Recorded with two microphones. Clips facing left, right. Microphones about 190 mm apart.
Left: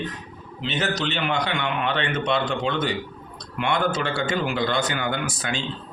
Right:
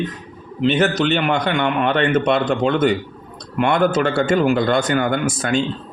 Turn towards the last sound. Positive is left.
turn(degrees=-50)  # may be behind; listen again after turning